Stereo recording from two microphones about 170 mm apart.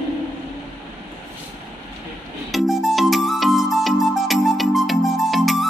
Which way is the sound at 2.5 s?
Centre (ahead or behind).